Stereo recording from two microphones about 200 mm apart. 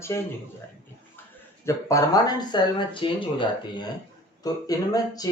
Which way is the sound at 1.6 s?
15° left (ahead or behind).